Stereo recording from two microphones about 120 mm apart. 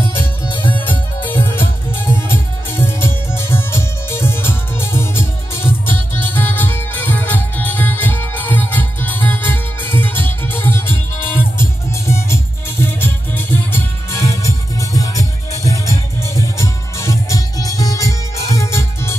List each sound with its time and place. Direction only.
0.5 s music: 45° left (ahead or behind)
1.2 s music: 15° left (ahead or behind)